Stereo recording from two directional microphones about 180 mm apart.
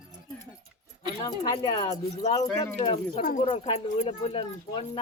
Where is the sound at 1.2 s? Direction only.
25° left (ahead or behind).